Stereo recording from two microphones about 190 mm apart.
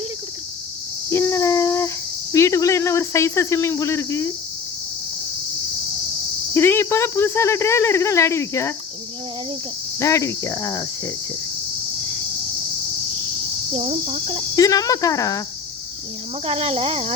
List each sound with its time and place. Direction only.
1.1 s a sound: 15° left (ahead or behind)
2.3 s speech: 15° left (ahead or behind)
6.5 s speech: 10° left (ahead or behind)
10.0 s speech: 15° left (ahead or behind)
13.7 s speech: 35° right (ahead or behind)
14.5 s speech: 20° left (ahead or behind)
16.5 s speech: 30° right (ahead or behind)